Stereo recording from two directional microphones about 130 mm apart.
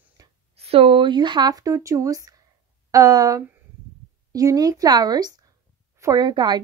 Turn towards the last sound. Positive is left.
turn(degrees=-35)  # may be behind; listen again after turning